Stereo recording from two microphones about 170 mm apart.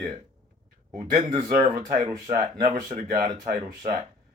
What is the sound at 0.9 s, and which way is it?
A man's voice, 25° right (ahead or behind).